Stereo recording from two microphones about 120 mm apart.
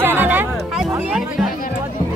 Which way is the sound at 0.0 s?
15° right (ahead or behind).